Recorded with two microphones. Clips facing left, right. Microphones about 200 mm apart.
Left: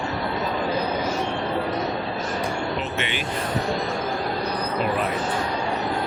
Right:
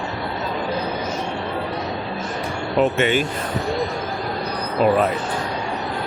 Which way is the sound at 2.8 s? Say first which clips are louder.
Right 10 dB; 45° right (ahead or behind).